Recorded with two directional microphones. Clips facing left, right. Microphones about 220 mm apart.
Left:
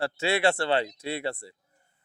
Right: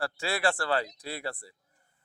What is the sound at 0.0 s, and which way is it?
Speech, 25° left (ahead or behind).